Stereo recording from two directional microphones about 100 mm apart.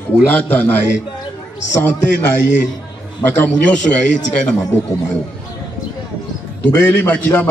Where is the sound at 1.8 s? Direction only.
25° left (ahead or behind).